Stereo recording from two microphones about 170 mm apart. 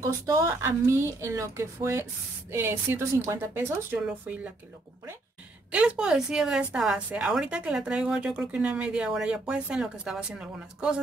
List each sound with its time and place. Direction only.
0.0 s a woman's voice: 20° right (ahead or behind)
5.7 s speech: 5° right (ahead or behind)